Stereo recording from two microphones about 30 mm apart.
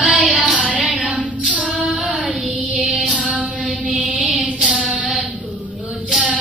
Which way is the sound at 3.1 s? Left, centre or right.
Right.